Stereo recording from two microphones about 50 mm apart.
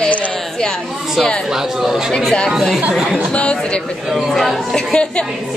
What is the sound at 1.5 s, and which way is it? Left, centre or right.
Speech, centre.